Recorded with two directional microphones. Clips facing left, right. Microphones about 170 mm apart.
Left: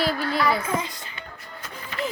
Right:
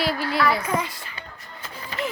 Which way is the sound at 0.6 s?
25° left (ahead or behind).